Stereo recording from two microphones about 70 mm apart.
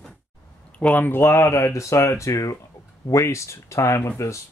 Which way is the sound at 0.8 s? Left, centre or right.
Left.